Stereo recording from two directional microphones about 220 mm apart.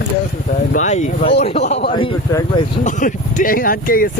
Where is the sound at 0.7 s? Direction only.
35° left (ahead or behind).